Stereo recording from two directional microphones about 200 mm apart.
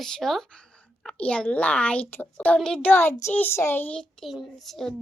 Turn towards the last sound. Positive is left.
turn(degrees=0)  # may be behind; listen again after turning